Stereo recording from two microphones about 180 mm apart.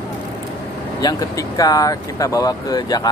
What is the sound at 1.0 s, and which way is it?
Speech, 20° left (ahead or behind).